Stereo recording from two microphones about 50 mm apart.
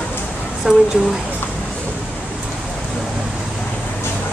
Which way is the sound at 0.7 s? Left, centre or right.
Centre.